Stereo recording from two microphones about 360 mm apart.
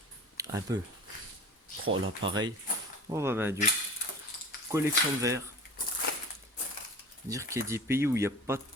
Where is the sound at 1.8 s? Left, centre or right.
Right.